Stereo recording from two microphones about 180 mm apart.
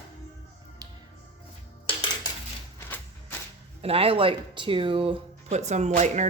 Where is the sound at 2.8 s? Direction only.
10° left (ahead or behind).